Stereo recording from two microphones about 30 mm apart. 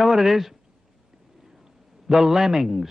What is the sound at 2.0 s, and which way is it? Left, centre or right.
Speech, centre.